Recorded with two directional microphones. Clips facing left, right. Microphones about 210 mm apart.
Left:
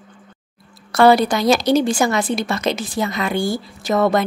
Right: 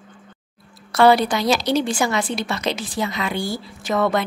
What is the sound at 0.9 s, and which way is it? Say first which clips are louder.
A woman's voice: left 2 dB; 45° left (ahead or behind).